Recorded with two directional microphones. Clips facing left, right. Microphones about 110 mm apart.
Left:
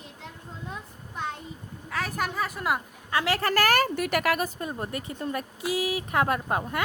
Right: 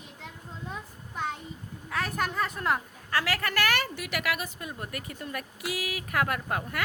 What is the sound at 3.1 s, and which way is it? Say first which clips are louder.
A woman's voice: left 4 dB; 25° left (ahead or behind).